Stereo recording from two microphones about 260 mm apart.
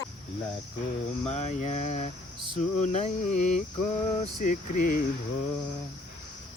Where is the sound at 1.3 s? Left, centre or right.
Left.